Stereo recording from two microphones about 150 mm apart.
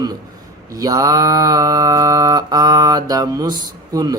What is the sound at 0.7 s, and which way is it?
Music, 25° right (ahead or behind).